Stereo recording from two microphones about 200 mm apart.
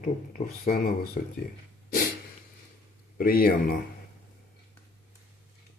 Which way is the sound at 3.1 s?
45° left (ahead or behind).